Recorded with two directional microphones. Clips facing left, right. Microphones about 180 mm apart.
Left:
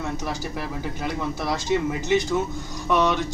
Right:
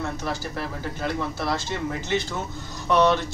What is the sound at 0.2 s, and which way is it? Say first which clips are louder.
Speech: even; 15° left (ahead or behind).